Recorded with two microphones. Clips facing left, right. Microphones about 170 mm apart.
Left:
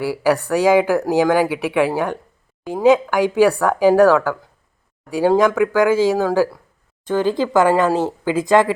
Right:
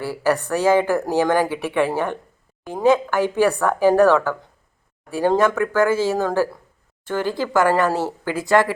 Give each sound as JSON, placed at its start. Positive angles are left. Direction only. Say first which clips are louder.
{"t": 0.0, "sound": "speech", "louder": "left 3 dB", "side_deg": 10}